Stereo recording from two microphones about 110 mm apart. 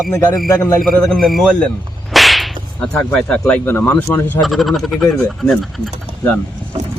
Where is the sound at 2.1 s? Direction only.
Centre (ahead or behind).